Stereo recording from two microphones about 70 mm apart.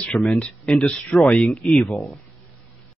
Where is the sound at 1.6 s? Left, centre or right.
Centre.